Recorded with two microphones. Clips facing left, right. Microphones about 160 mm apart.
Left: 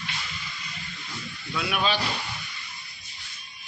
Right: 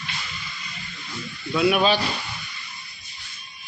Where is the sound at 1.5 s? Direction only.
20° right (ahead or behind).